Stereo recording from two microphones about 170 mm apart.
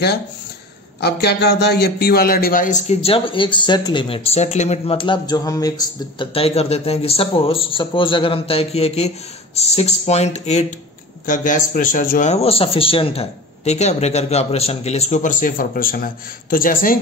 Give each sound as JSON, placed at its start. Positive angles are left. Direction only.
{"t": 1.0, "sound": "a man's voice", "side_deg": 75}